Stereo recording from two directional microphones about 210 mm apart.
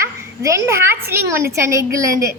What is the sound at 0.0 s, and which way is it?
A child's voice, 15° right (ahead or behind).